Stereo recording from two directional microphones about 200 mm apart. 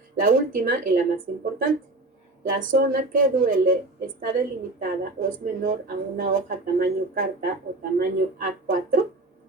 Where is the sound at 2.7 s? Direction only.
45° right (ahead or behind).